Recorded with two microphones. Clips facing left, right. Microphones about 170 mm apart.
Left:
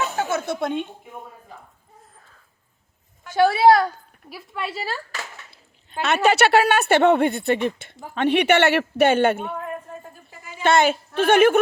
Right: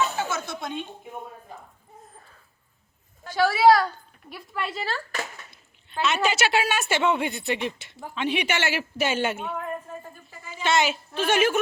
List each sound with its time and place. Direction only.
0.2 s music: 60° left (ahead or behind)
3.3 s a woman's voice: 25° left (ahead or behind)
4.3 s a woman's voice: 5° left (ahead or behind)
6.2 s a woman's voice: 60° left (ahead or behind)
10.6 s a woman's voice: 55° left (ahead or behind)